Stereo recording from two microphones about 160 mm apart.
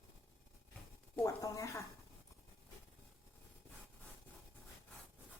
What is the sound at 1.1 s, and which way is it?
Speech, 20° left (ahead or behind).